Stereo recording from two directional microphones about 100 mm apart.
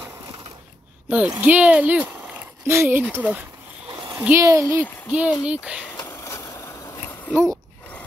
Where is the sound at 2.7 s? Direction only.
25° right (ahead or behind).